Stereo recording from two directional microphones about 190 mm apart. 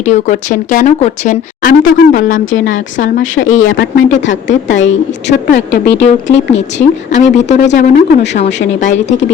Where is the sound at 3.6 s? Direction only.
75° left (ahead or behind).